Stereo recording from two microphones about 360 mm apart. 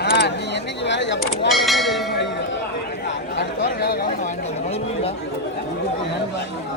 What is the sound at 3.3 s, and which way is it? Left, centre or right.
Chatter, left.